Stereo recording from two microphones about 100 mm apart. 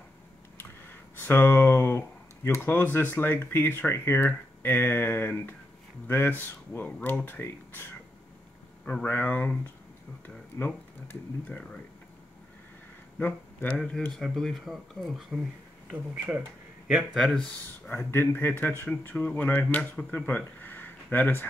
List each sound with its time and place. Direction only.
0.6 s speech: 20° left (ahead or behind)
9.0 s speech: 15° left (ahead or behind)
13.2 s speech: 20° left (ahead or behind)
13.7 s speech: 5° left (ahead or behind)
15.9 s speech: 15° right (ahead or behind)
17.8 s speech: 20° left (ahead or behind)